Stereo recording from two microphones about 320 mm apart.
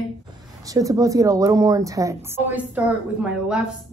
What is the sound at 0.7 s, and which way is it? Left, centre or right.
A woman's voice, centre.